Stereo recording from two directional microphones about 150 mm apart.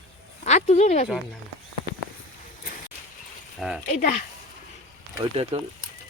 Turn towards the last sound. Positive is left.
turn(degrees=-45)  # may be behind; listen again after turning